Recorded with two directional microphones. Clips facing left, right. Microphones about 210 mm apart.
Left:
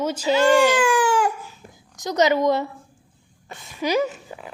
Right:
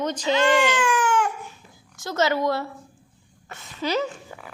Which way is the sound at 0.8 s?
35° left (ahead or behind).